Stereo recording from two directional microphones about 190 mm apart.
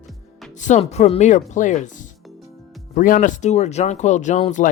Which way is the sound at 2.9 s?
40° left (ahead or behind).